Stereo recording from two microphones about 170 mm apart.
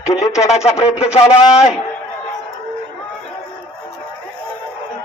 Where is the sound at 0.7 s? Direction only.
35° left (ahead or behind).